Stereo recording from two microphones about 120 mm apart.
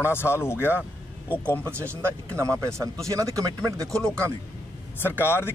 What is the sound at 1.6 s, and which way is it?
Speech, 20° right (ahead or behind).